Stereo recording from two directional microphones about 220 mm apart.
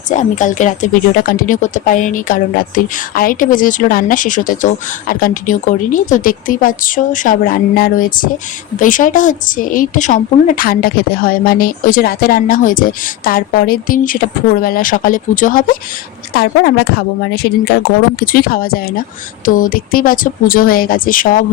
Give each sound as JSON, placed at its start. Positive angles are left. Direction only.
{"t": 0.1, "sound": "a woman's voice", "side_deg": 35}